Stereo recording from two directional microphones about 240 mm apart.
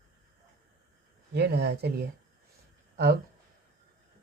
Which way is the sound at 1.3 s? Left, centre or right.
Right.